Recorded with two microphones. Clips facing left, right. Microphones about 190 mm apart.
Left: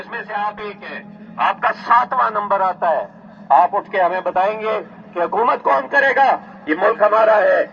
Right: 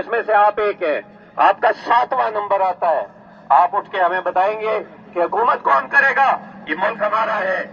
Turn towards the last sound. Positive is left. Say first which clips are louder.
# left 8 dB
turn(degrees=55)  # may be behind; listen again after turning